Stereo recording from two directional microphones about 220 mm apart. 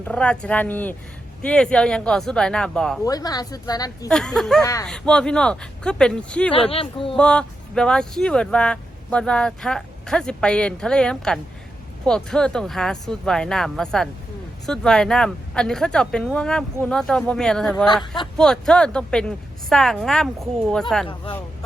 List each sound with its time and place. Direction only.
0.0 s speech: 5° left (ahead or behind)
3.0 s speech: 15° left (ahead or behind)
4.1 s speech: centre (ahead or behind)
4.6 s speech: 15° left (ahead or behind)
4.9 s speech: 5° left (ahead or behind)
6.5 s speech: 25° left (ahead or behind)
7.2 s speech: 5° left (ahead or behind)